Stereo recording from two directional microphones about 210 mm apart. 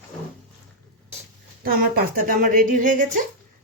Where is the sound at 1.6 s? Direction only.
45° right (ahead or behind).